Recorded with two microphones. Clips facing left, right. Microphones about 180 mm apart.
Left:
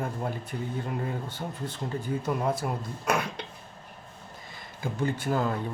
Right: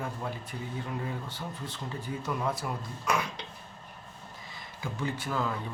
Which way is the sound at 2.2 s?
25° left (ahead or behind).